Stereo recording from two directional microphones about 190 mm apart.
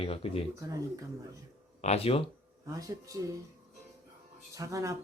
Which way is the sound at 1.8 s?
35° left (ahead or behind).